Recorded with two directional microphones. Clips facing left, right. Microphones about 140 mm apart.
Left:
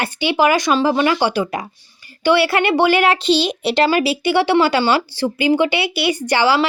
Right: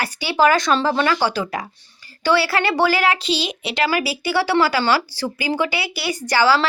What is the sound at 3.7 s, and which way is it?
A woman's voice, 25° left (ahead or behind).